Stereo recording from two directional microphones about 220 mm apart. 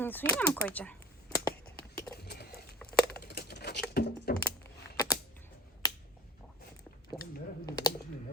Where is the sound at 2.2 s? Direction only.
45° left (ahead or behind).